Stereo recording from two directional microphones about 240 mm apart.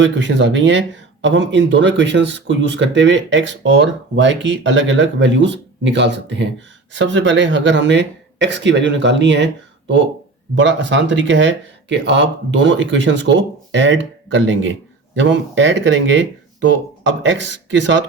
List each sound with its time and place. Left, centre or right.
0.0 s speech: right